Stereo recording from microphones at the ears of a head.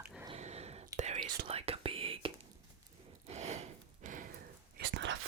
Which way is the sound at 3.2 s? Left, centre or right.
Right.